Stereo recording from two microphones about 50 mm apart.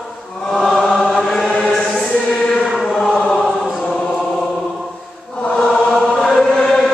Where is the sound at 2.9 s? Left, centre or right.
Centre.